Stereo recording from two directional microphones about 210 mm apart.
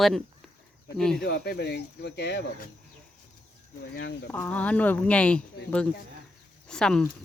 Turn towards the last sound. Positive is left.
turn(degrees=5)  # may be behind; listen again after turning